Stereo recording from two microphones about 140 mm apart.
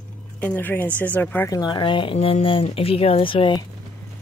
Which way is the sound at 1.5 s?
30° left (ahead or behind).